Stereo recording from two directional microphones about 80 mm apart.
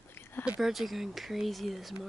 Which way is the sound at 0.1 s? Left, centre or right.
Left.